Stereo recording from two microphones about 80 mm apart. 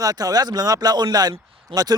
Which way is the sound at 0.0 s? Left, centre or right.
Right.